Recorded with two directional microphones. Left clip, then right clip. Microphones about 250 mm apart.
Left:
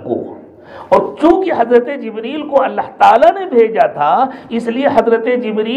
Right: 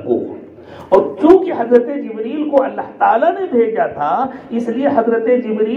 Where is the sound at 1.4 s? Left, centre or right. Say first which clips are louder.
Left 2 dB; left.